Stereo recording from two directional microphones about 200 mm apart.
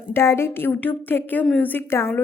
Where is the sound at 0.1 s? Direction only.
15° left (ahead or behind).